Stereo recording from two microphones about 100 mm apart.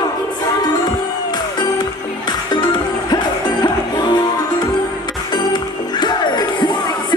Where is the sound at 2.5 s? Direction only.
45° left (ahead or behind).